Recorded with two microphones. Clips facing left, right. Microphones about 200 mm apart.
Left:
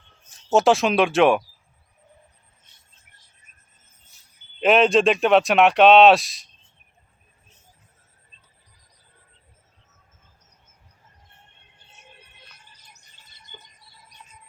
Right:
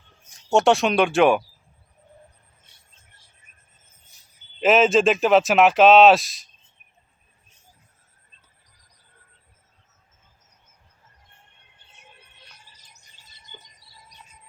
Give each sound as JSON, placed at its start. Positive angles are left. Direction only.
{"t": 0.5, "sound": "speech", "side_deg": 0}
{"t": 4.6, "sound": "speech", "side_deg": 0}
{"t": 13.8, "sound": "cricket", "side_deg": 55}